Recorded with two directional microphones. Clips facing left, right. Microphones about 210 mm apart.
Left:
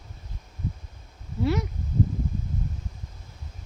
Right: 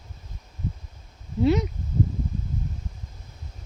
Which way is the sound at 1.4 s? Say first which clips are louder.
Right 5 dB; 20° right (ahead or behind).